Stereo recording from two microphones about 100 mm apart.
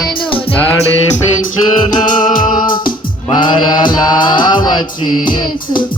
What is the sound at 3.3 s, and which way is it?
Mantra, 50° left (ahead or behind).